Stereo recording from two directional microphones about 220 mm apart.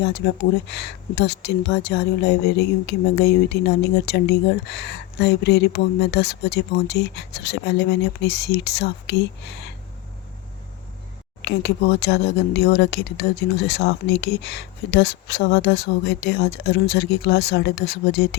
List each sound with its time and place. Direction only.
0.2 s speech: 50° left (ahead or behind)
11.4 s speech: 50° left (ahead or behind)